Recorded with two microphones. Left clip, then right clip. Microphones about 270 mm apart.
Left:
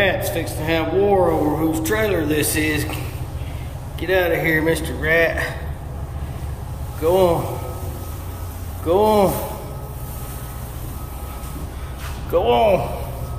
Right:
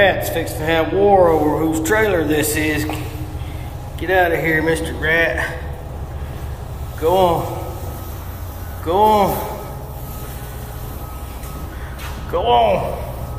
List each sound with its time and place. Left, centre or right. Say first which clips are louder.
0.3 s speech: right 3 dB; centre
4.0 s speech: right 2 dB; centre
7.0 s speech: right 2 dB; centre
8.8 s speech: right 2 dB; centre
12.3 s speech: right 1 dB; centre